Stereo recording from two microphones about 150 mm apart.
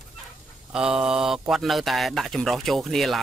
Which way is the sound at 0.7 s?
5° right (ahead or behind).